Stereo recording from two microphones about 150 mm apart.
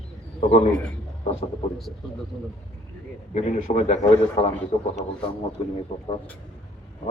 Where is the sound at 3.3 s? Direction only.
50° left (ahead or behind).